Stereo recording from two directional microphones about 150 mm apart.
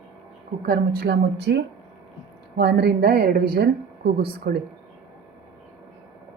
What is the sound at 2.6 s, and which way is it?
A woman's voice, 90° right.